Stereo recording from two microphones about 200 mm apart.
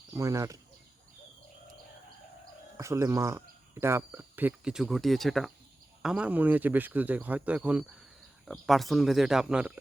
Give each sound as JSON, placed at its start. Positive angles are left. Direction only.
{"t": 0.1, "sound": "speech", "side_deg": -15}
{"t": 2.7, "sound": "speech", "side_deg": -15}